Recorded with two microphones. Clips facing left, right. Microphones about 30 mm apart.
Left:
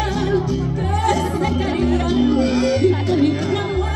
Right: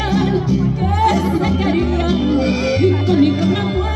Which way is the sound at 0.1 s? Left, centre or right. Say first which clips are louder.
Right 3 dB; centre.